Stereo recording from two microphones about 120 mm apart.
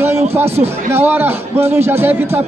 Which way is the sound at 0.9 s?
20° right (ahead or behind).